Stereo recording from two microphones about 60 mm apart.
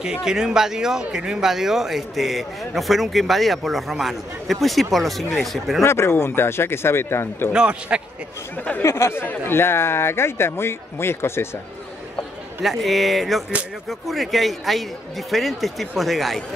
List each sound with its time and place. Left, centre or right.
0.0 s a man's voice: centre
5.8 s speech: left
7.5 s a man's voice: centre
8.8 s speech: left
9.2 s speech: left
12.6 s a man's voice: centre